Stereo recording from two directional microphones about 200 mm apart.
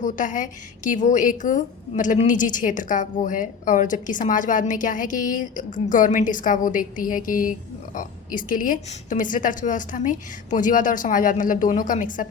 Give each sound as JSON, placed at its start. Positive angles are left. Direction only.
{"t": 0.0, "sound": "a woman's voice", "side_deg": 40}